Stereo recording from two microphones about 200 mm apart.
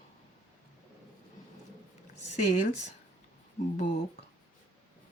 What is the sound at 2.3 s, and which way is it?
Speech, 40° left (ahead or behind).